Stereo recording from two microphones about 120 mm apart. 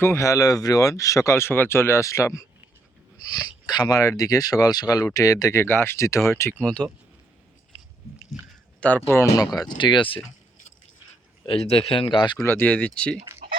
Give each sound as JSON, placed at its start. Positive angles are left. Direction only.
{"t": 0.0, "sound": "speech", "side_deg": 25}
{"t": 6.6, "sound": "speech", "side_deg": 10}
{"t": 9.0, "sound": "speech", "side_deg": 20}
{"t": 9.6, "sound": "speech", "side_deg": 40}
{"t": 11.4, "sound": "speech", "side_deg": 55}
{"t": 12.4, "sound": "speech", "side_deg": 20}